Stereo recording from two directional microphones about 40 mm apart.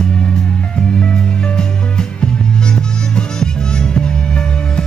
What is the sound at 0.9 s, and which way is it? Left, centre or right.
Music, left.